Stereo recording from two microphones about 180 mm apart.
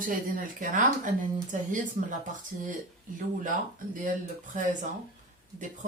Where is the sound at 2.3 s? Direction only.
45° right (ahead or behind).